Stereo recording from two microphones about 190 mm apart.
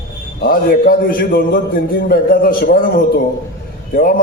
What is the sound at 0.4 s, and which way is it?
A man's voice, 50° left (ahead or behind).